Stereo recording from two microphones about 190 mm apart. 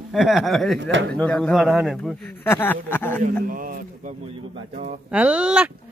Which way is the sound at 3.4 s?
45° right (ahead or behind).